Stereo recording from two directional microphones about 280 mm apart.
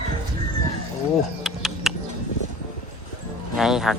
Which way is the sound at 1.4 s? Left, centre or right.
Centre.